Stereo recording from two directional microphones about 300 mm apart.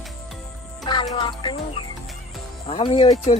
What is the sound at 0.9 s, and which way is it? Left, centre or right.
Music, centre.